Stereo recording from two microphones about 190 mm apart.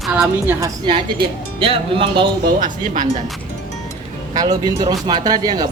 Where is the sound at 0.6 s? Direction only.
25° right (ahead or behind).